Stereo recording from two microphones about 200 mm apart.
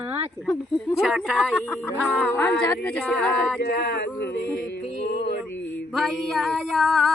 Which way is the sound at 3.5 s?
50° left (ahead or behind).